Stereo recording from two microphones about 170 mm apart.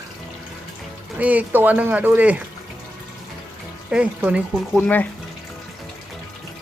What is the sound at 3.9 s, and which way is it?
Speech, 5° right (ahead or behind).